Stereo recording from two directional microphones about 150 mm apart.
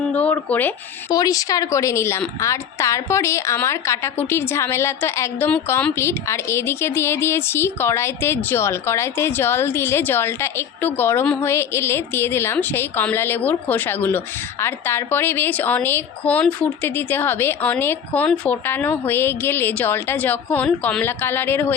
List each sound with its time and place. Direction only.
0.2 s speech: 10° left (ahead or behind)
1.1 s a woman's voice: 25° left (ahead or behind)